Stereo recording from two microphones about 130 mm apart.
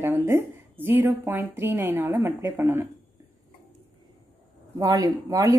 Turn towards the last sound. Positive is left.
turn(degrees=-25)  # may be behind; listen again after turning